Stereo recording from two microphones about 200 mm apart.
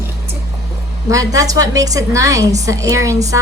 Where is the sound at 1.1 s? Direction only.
15° right (ahead or behind).